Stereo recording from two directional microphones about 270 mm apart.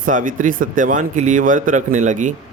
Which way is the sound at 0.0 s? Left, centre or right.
Right.